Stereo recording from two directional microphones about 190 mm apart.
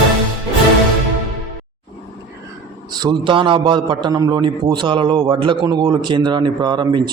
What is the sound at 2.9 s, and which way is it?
A man's voice, 20° right (ahead or behind).